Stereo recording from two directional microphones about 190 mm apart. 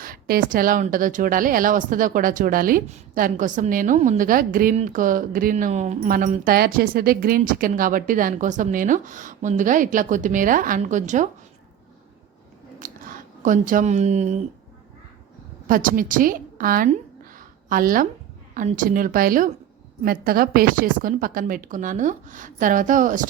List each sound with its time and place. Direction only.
0.0 s speech: 50° right (ahead or behind)
12.8 s a sound: 45° right (ahead or behind)
15.6 s a woman's voice: 45° right (ahead or behind)